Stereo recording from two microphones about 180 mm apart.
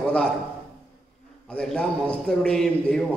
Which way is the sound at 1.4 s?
5° left (ahead or behind).